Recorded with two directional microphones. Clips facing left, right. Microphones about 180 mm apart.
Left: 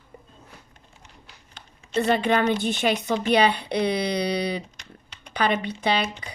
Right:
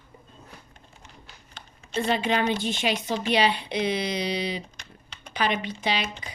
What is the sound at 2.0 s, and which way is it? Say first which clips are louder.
Speech: left 3 dB; 50° left (ahead or behind).